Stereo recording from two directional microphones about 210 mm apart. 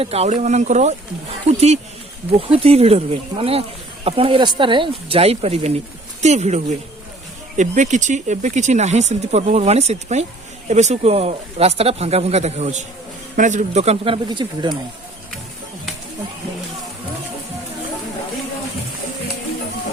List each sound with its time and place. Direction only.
0.0 s speech: 30° right (ahead or behind)